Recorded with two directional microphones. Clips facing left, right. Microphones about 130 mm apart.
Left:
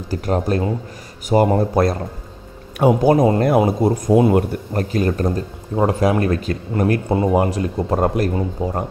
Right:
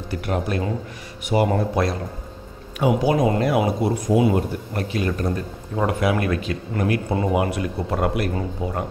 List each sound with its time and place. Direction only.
0.1 s speech: 35° left (ahead or behind)
3.2 s speech: 35° left (ahead or behind)
3.4 s speech: 45° left (ahead or behind)
4.7 s speech: 40° left (ahead or behind)